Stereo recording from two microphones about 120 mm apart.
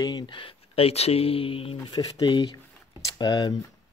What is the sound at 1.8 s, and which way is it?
Speech, 35° left (ahead or behind).